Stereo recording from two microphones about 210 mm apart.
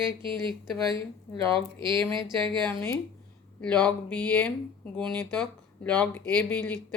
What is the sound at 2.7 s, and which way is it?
Speech, 10° left (ahead or behind).